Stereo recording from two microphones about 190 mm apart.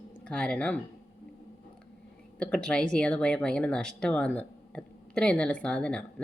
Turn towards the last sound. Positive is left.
turn(degrees=5)  # may be behind; listen again after turning